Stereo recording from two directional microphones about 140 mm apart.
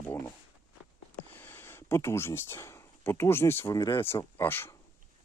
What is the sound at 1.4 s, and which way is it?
Speech, 15° left (ahead or behind).